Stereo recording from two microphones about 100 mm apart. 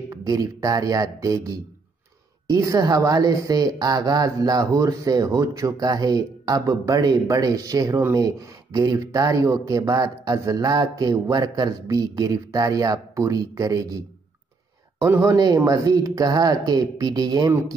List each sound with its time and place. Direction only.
0.1 s speech: 35° right (ahead or behind)
15.0 s speech: 30° right (ahead or behind)